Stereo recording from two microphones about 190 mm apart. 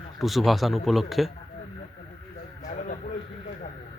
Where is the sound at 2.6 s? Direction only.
45° left (ahead or behind).